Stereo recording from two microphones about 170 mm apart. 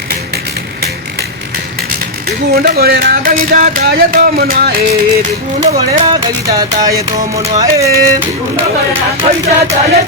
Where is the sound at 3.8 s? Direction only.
60° right (ahead or behind).